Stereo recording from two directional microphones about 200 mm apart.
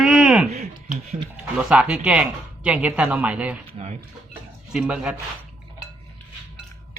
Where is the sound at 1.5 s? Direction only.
5° right (ahead or behind).